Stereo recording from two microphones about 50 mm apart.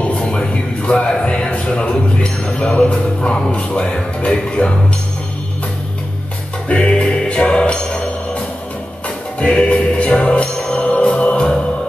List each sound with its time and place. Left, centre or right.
0.0 s a sound: left
1.7 s speech: centre
6.7 s music: left